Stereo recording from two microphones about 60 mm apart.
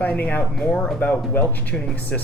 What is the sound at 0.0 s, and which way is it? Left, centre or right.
Speech, left.